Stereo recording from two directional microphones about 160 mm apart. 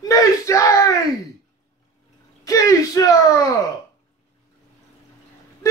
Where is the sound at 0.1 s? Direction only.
20° left (ahead or behind).